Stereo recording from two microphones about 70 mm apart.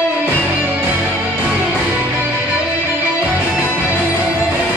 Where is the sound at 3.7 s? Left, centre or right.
Right.